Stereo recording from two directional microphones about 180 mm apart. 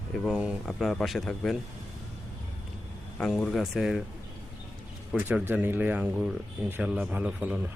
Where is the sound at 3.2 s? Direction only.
5° left (ahead or behind).